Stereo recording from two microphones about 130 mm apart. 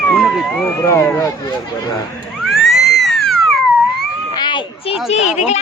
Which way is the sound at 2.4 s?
Centre (ahead or behind).